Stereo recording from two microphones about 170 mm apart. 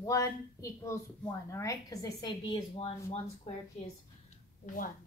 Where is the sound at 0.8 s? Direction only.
15° left (ahead or behind).